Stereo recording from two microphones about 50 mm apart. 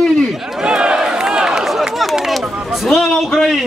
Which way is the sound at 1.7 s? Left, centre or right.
Centre.